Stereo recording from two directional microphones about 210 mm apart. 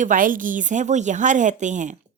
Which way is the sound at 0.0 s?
40° right (ahead or behind).